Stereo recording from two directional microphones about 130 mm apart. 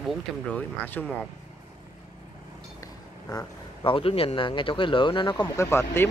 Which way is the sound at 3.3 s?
40° left (ahead or behind).